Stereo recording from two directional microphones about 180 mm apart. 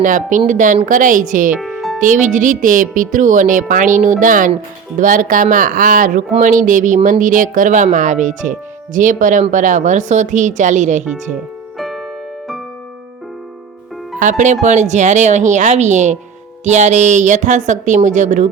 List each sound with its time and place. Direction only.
0.0 s speech: 45° right (ahead or behind)
1.5 s music: centre (ahead or behind)
2.0 s speech: 45° right (ahead or behind)
11.8 s music: centre (ahead or behind)
14.2 s speech: 45° right (ahead or behind)